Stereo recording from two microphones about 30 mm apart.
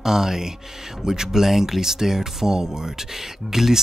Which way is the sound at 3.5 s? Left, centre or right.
Centre.